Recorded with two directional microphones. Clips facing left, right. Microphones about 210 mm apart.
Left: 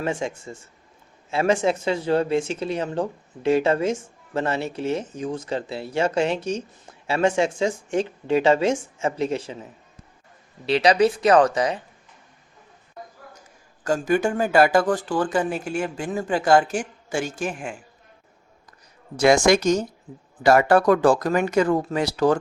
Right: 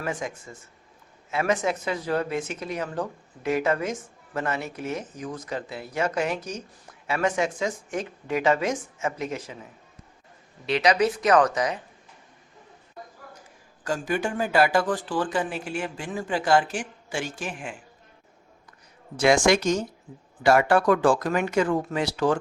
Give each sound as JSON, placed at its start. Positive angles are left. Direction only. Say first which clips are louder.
{"t": 0.0, "sound": "speech", "louder": "left 5 dB", "side_deg": 25}
{"t": 10.7, "sound": "speech", "louder": "left 4 dB", "side_deg": 30}
{"t": 13.8, "sound": "speech", "louder": "left 6 dB", "side_deg": 45}
{"t": 19.1, "sound": "speech", "louder": "left 3 dB", "side_deg": 40}